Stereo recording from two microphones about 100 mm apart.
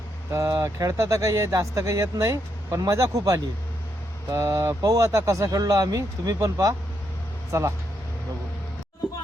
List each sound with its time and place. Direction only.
0.3 s speech: 30° right (ahead or behind)